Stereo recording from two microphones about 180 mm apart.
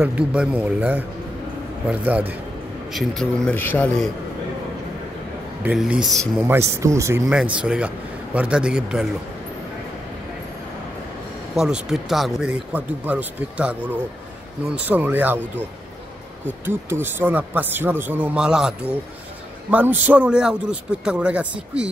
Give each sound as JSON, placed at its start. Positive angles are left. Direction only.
{"t": 0.0, "sound": "a man's voice", "side_deg": -5}
{"t": 5.6, "sound": "speech", "side_deg": -5}
{"t": 6.4, "sound": "a man's voice", "side_deg": -15}
{"t": 7.2, "sound": "speech", "side_deg": -5}
{"t": 11.5, "sound": "speech", "side_deg": 0}
{"t": 14.9, "sound": "a man's voice", "side_deg": -10}
{"t": 16.6, "sound": "a man's voice", "side_deg": -10}